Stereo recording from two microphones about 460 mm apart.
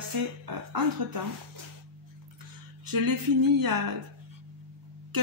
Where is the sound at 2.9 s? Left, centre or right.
Right.